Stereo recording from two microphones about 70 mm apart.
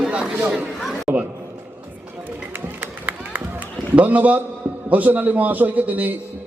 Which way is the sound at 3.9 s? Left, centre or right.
Right.